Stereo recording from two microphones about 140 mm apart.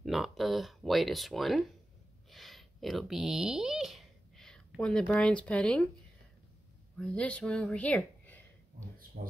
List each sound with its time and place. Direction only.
0.0 s speech: centre (ahead or behind)
7.0 s speech: 5° left (ahead or behind)
9.2 s speech: 80° right